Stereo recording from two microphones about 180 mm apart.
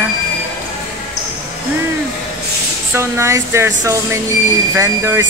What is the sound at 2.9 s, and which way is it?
Speech, 15° right (ahead or behind).